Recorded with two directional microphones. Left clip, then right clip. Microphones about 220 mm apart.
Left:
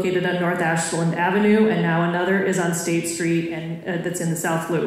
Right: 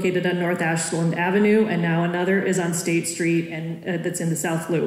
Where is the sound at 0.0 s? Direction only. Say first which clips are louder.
Left 1 dB; 35° right (ahead or behind).